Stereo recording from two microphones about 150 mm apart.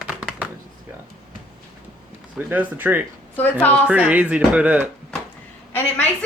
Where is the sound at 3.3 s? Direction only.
10° left (ahead or behind).